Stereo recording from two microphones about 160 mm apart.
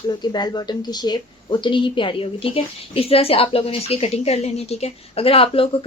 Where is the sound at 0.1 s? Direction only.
25° left (ahead or behind).